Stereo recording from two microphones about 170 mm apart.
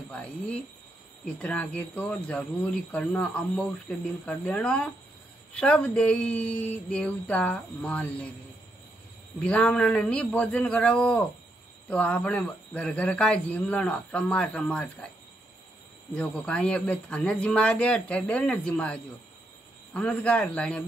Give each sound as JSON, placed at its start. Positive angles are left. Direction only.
{"t": 0.1, "sound": "speech", "side_deg": 5}
{"t": 9.4, "sound": "speech", "side_deg": 5}
{"t": 16.1, "sound": "speech", "side_deg": 5}